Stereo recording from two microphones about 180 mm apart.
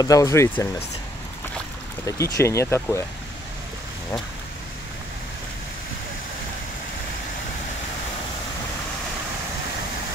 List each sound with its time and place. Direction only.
0.0 s speech: 20° left (ahead or behind)
2.0 s speech: 20° left (ahead or behind)